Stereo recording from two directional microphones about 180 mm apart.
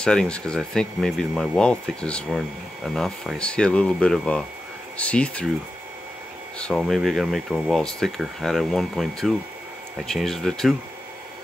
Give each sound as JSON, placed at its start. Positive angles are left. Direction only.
{"t": 0.0, "sound": "speech", "side_deg": 5}
{"t": 6.6, "sound": "speech", "side_deg": 0}